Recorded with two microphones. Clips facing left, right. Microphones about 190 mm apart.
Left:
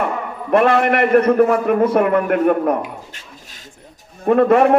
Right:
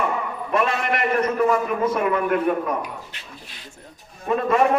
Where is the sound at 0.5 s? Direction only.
60° left (ahead or behind).